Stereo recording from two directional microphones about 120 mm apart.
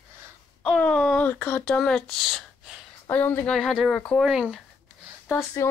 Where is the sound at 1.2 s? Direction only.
15° left (ahead or behind).